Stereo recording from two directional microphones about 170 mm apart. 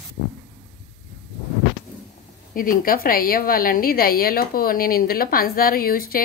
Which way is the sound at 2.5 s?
55° left (ahead or behind).